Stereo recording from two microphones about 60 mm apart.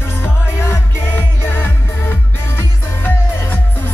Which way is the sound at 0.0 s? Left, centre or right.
Left.